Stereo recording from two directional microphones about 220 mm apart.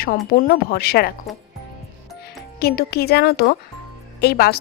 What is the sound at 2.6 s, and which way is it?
A woman's voice, 45° left (ahead or behind).